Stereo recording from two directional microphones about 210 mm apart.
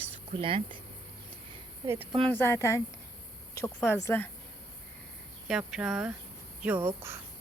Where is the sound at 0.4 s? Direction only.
25° right (ahead or behind).